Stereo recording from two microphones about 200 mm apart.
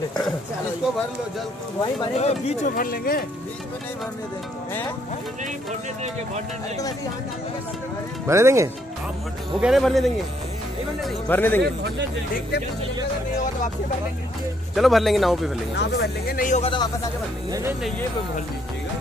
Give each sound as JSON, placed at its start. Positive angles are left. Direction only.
{"t": 2.1, "sound": "speech", "side_deg": 35}
{"t": 8.3, "sound": "speech", "side_deg": -15}
{"t": 9.6, "sound": "speech", "side_deg": 0}
{"t": 14.8, "sound": "speech", "side_deg": 0}
{"t": 15.7, "sound": "speech", "side_deg": 55}